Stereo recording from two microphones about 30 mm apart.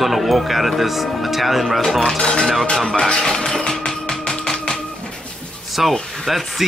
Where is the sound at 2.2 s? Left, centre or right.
Left.